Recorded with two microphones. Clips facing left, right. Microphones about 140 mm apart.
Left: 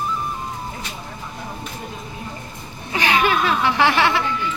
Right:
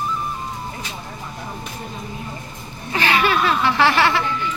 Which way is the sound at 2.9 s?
15° left (ahead or behind).